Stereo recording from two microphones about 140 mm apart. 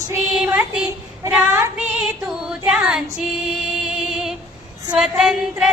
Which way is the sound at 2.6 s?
5° right (ahead or behind).